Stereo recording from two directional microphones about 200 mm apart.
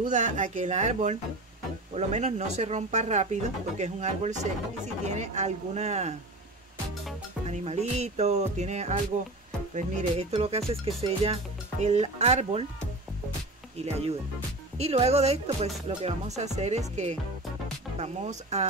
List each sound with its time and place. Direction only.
0.0 s speech: 35° right (ahead or behind)
7.4 s speech: 35° right (ahead or behind)
10.7 s music: 30° right (ahead or behind)
11.8 s speech: 35° right (ahead or behind)
13.8 s speech: 30° right (ahead or behind)
17.9 s speech: 35° right (ahead or behind)